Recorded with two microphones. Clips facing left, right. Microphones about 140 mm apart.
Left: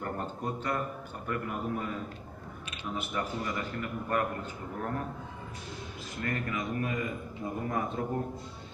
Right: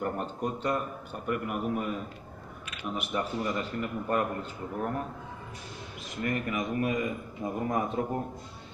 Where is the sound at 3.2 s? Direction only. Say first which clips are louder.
Right 4 dB; 20° right (ahead or behind).